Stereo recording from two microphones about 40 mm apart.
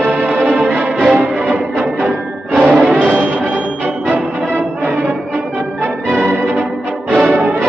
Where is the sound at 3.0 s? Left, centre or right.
Right.